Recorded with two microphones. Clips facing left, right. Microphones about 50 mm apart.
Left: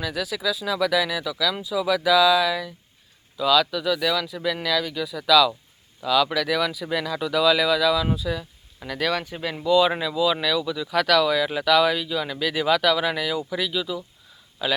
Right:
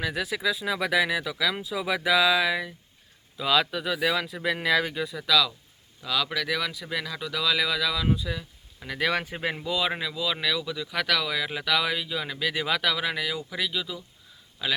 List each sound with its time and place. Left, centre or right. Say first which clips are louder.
0.0 s speech: left 1 dB; centre; by 4.9 s right
5.1 s speech: left 7 dB; centre; by 9.6 s right
9.6 s speech: left 12 dB; centre